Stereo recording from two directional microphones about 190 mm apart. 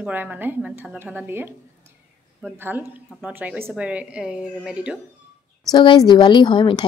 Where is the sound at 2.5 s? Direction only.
10° right (ahead or behind).